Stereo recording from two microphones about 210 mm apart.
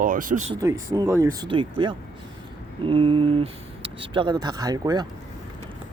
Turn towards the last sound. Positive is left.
turn(degrees=-20)  # may be behind; listen again after turning